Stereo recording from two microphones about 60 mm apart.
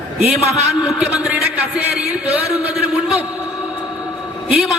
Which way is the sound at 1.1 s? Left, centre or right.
Centre.